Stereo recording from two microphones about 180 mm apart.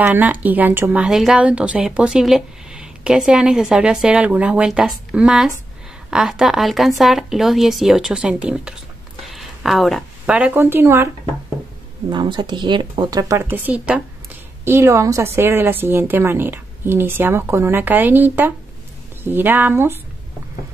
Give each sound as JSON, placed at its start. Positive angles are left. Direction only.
{"t": 0.0, "sound": "a woman's voice", "side_deg": -10}
{"t": 12.1, "sound": "a woman's voice", "side_deg": -25}